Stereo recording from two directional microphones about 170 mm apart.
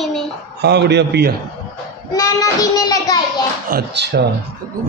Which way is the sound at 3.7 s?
80° right.